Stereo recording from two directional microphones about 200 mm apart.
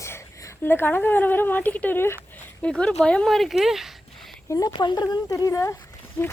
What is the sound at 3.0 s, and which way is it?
Speech, 5° left (ahead or behind).